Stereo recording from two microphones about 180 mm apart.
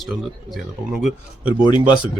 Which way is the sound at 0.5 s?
Centre (ahead or behind).